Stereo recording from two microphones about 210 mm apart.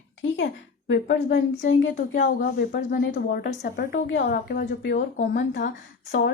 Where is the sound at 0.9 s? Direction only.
55° left (ahead or behind).